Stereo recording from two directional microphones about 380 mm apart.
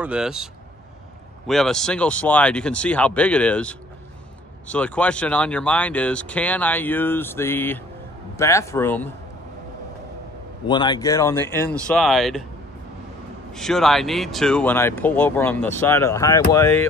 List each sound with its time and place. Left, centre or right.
0.0 s speech: centre
1.5 s speech: centre
10.7 s speech: centre
13.5 s speech: centre